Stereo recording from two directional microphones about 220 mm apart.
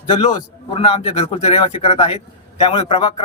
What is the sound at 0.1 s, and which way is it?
A man's voice, 25° left (ahead or behind).